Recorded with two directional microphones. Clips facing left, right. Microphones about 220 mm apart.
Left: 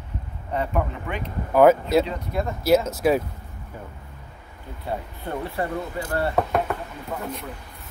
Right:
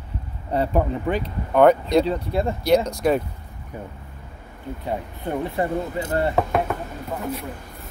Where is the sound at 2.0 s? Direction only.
30° right (ahead or behind).